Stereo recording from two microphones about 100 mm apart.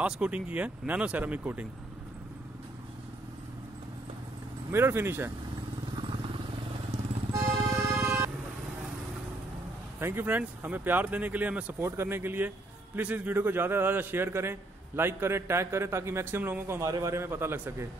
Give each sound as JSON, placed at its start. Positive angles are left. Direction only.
{"t": 0.0, "sound": "speech", "side_deg": -15}
{"t": 4.6, "sound": "a man's voice", "side_deg": -25}
{"t": 7.3, "sound": "music", "side_deg": -30}
{"t": 9.9, "sound": "a man's voice", "side_deg": -25}